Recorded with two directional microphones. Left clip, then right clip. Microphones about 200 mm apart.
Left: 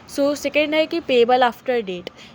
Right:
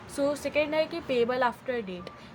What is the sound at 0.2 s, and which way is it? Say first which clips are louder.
A woman's voice: left 8 dB; 35° left (ahead or behind).